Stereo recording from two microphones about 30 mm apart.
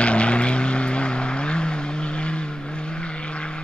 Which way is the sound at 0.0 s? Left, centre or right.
Left.